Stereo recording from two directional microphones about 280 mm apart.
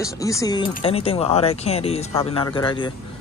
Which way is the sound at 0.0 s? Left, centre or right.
Centre.